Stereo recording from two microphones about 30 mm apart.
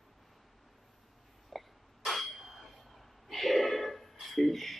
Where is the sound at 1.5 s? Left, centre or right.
Centre.